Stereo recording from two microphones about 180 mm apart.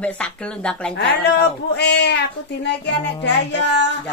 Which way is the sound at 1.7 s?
70° left (ahead or behind).